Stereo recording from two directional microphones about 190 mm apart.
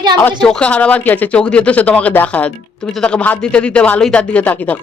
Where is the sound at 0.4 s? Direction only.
5° left (ahead or behind).